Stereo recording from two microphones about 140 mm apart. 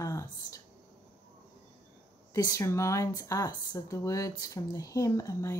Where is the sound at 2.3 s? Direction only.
25° left (ahead or behind).